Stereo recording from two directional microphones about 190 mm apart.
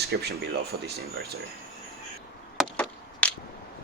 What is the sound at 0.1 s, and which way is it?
Speech, 55° right (ahead or behind).